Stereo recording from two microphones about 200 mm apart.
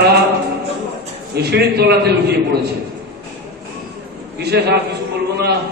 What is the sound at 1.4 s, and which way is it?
A man's voice, 55° right (ahead or behind).